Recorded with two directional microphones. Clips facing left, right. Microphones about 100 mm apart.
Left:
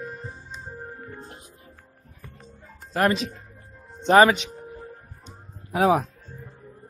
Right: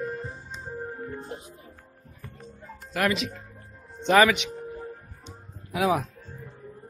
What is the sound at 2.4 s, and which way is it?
Music, 35° left (ahead or behind).